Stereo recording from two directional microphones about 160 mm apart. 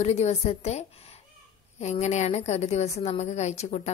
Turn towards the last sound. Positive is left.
turn(degrees=40)  # may be behind; listen again after turning